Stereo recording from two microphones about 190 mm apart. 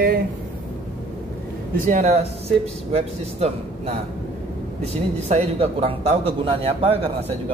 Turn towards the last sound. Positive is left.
turn(degrees=-30)  # may be behind; listen again after turning